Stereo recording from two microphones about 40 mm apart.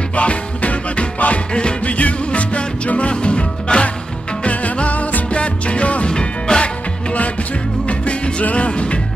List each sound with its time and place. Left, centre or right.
0.1 s music: left
6.1 s music: left
8.0 s music: left